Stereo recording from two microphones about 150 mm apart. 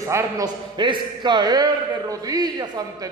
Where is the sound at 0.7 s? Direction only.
30° right (ahead or behind).